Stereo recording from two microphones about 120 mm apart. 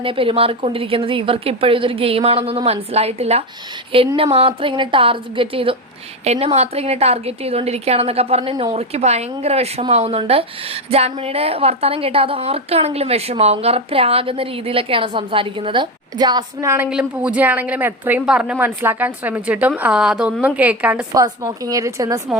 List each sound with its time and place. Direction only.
0.0 s a woman's voice: 45° right (ahead or behind)
6.2 s a woman's voice: 65° right (ahead or behind); by 16.6 s 35° right (ahead or behind)
16.6 s a woman's voice: 15° right (ahead or behind)
21.1 s speech: 30° right (ahead or behind)